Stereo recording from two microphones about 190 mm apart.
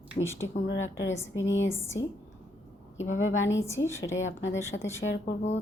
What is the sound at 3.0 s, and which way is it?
Speech, 90° left.